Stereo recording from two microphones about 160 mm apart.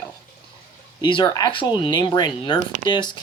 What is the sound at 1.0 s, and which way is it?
Speech, 30° left (ahead or behind).